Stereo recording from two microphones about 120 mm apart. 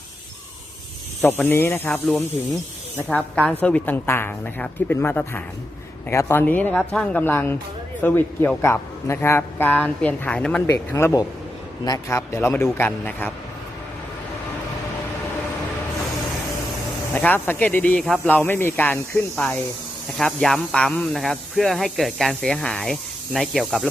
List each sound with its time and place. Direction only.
1.2 s a man's voice: 15° left (ahead or behind)
3.1 s a man's voice: 10° left (ahead or behind)
10.7 s a man's voice: 25° left (ahead or behind)
17.2 s a man's voice: 15° left (ahead or behind)
20.1 s speech: 5° left (ahead or behind)